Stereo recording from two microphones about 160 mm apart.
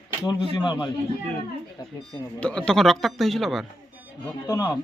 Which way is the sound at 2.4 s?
5° left (ahead or behind).